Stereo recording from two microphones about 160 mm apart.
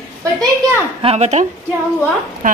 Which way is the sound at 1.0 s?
45° right (ahead or behind).